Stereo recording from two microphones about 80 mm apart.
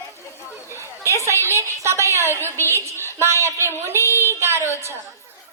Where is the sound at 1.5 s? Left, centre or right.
Right.